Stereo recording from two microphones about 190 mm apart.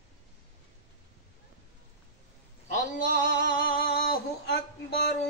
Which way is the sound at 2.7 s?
45° left (ahead or behind).